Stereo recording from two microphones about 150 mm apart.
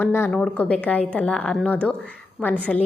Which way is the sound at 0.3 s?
5° left (ahead or behind).